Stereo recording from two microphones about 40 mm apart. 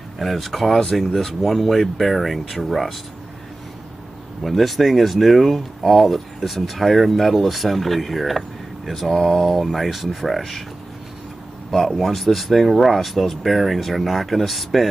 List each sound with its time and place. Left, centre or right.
0.2 s speech: centre
4.4 s speech: centre
11.7 s speech: centre